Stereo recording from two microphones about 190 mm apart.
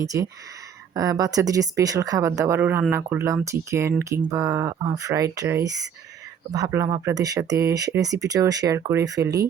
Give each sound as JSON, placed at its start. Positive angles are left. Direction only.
{"t": 0.0, "sound": "speech", "side_deg": -15}